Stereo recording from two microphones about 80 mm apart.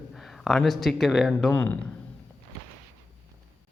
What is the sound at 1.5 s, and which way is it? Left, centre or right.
Speech, left.